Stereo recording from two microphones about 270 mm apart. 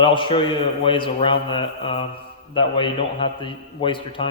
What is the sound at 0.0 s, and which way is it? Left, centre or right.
A man's voice, centre.